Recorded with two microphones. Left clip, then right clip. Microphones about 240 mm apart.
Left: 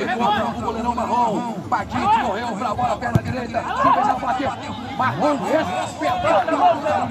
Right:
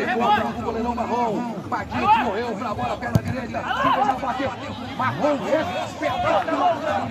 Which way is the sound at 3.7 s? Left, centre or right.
Right.